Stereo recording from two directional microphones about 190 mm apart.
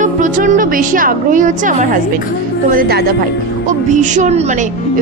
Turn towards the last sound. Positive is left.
turn(degrees=-35)  # may be behind; listen again after turning